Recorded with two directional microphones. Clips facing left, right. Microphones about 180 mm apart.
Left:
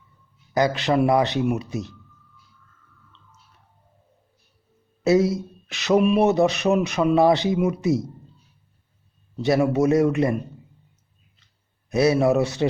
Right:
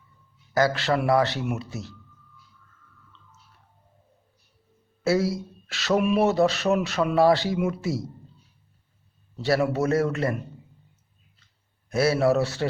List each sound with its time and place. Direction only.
0.5 s speech: 20° left (ahead or behind)
5.0 s speech: 20° left (ahead or behind)
9.4 s speech: 20° left (ahead or behind)
11.9 s speech: 20° left (ahead or behind)